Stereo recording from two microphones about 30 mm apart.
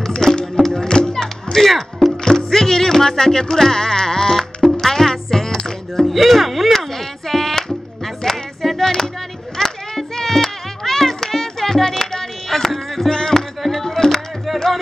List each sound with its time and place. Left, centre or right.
0.2 s music: centre
1.6 s speech: centre
3.7 s sheep: centre
4.8 s music: centre
6.0 s speech: centre
6.8 s a sound: centre
8.6 s music: centre